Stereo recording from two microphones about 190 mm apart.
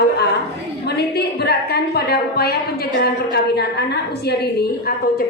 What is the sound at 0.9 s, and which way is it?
A woman's voice, 60° left (ahead or behind).